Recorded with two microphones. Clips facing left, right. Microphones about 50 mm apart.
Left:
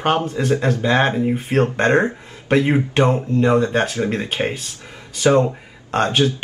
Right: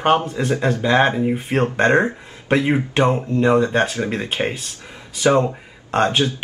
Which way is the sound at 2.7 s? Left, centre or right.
Centre.